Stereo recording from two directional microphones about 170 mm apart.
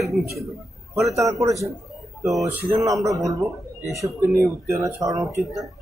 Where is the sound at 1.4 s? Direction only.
20° right (ahead or behind).